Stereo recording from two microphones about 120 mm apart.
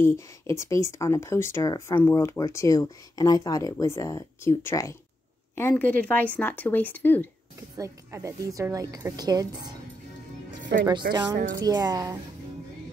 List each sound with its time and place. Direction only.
0.0 s a woman's voice: 20° left (ahead or behind)
7.7 s a woman's voice: 25° right (ahead or behind)
10.9 s a woman's voice: 35° right (ahead or behind)